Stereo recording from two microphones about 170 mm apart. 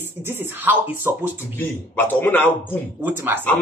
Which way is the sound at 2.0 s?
10° left (ahead or behind).